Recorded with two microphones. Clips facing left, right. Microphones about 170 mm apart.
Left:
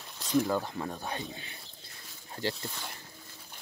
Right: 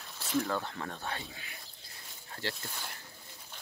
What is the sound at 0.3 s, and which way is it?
Speech, 15° left (ahead or behind).